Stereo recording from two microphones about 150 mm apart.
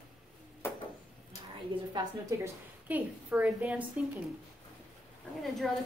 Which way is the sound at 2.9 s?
10° right (ahead or behind).